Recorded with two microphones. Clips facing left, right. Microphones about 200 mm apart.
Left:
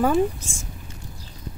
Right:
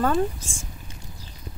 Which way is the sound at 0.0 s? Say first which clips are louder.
Left 3 dB; 10° left (ahead or behind).